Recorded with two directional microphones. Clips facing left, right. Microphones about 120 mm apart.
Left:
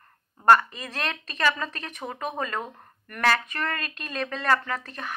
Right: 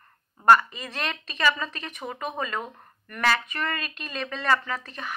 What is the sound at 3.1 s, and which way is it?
Speech, 45° left (ahead or behind).